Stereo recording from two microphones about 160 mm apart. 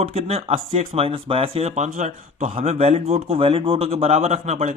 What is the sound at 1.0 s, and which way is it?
Speech, 35° right (ahead or behind).